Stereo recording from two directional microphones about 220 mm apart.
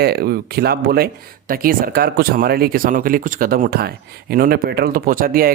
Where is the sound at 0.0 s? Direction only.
45° right (ahead or behind).